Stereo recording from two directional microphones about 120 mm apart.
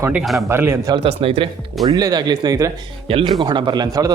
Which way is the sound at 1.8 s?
35° right (ahead or behind).